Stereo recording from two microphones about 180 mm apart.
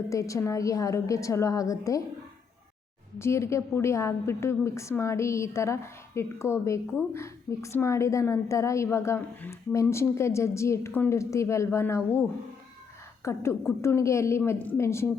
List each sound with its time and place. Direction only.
0.1 s a woman's voice: 15° left (ahead or behind)
3.2 s a woman's voice: 15° left (ahead or behind)
13.2 s a woman's voice: 15° left (ahead or behind)